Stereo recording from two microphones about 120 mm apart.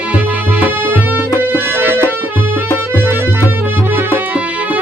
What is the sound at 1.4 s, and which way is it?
Music, 15° right (ahead or behind).